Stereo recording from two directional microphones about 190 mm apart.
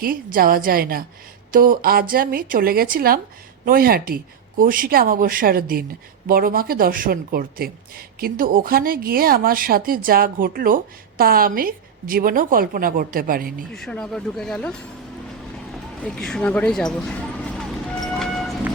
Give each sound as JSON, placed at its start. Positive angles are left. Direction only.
{"t": 0.0, "sound": "speech", "side_deg": -50}
{"t": 13.7, "sound": "speech", "side_deg": 5}
{"t": 16.0, "sound": "speech", "side_deg": 5}